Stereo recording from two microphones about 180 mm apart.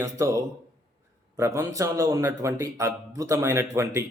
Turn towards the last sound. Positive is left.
turn(degrees=-15)  # may be behind; listen again after turning